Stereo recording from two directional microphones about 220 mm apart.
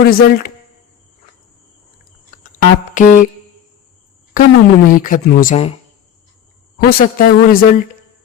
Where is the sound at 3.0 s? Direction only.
35° left (ahead or behind).